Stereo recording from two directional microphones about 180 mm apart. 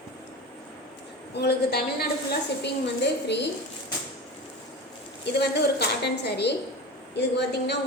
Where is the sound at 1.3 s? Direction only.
65° left (ahead or behind).